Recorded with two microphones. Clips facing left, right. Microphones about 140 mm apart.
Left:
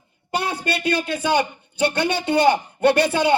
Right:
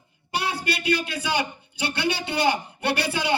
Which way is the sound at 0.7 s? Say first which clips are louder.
Left 3 dB; 45° left (ahead or behind).